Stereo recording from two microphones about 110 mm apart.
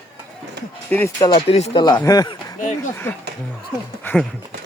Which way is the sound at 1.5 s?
70° left (ahead or behind).